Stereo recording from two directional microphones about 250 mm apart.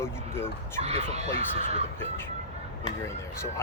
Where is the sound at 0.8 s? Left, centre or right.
Right.